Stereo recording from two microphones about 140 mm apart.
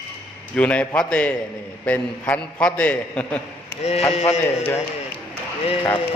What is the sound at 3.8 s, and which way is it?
Speech, 50° left (ahead or behind).